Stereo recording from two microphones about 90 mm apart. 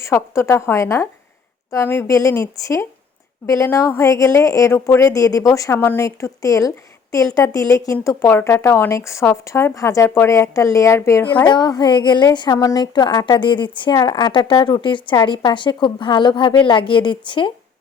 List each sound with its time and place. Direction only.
0.0 s a woman's voice: 30° left (ahead or behind)
2.0 s speech: 40° left (ahead or behind)
8.0 s speech: 25° left (ahead or behind)
11.2 s a woman's voice: 20° left (ahead or behind)
11.4 s a woman's voice: 55° left (ahead or behind)
13.4 s a woman's voice: 65° left (ahead or behind)
13.9 s a woman's voice: 50° left (ahead or behind)
14.8 s a woman's voice: 65° left (ahead or behind)
15.4 s a woman's voice: 55° left (ahead or behind)